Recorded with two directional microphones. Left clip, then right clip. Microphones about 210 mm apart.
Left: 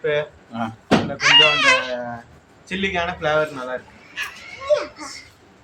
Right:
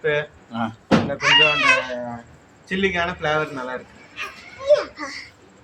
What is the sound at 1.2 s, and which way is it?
Speech, 45° left (ahead or behind).